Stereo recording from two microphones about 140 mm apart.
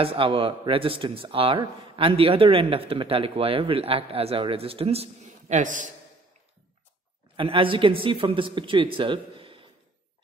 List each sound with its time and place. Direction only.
0.0 s speech: 40° right (ahead or behind); by 5.9 s 65° right (ahead or behind)
7.3 s speech: 40° right (ahead or behind)